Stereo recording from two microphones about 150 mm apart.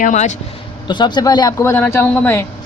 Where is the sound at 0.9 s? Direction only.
30° left (ahead or behind); by 2.5 s 15° left (ahead or behind).